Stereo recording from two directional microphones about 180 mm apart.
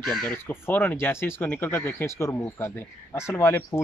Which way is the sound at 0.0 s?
Centre (ahead or behind).